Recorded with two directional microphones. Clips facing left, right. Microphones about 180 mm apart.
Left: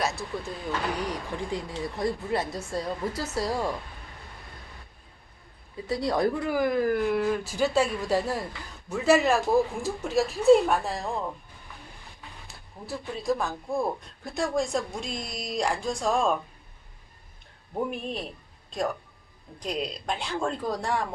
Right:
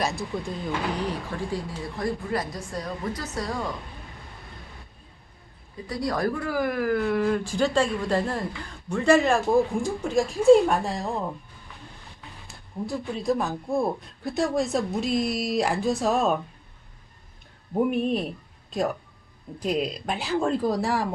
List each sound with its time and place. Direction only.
0.3 s speech: centre (ahead or behind)
1.0 s speech: 15° left (ahead or behind)
5.9 s speech: 25° left (ahead or behind)
6.6 s speech: 55° right (ahead or behind)
6.8 s speech: 10° left (ahead or behind)
12.5 s a woman's voice: centre (ahead or behind)
17.9 s speech: centre (ahead or behind)